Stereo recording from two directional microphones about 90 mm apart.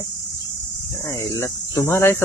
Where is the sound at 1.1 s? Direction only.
35° left (ahead or behind).